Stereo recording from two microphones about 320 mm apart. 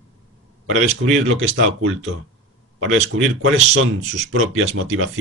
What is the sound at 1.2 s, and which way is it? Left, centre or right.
Speech, right.